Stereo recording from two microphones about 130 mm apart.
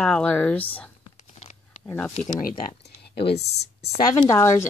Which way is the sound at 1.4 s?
65° left (ahead or behind).